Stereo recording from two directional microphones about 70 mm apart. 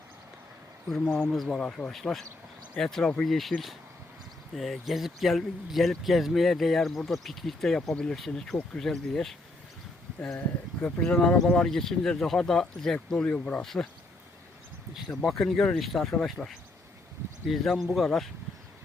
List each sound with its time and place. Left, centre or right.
0.9 s speech: centre
4.5 s speech: centre
10.3 s speech: left
13.2 s speech: centre
13.6 s speech: centre
15.1 s speech: centre